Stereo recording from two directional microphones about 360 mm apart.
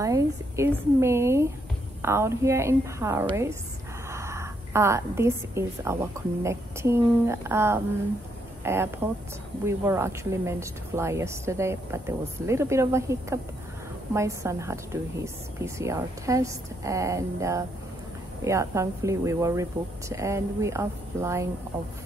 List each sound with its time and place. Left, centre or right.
0.0 s a woman's voice: centre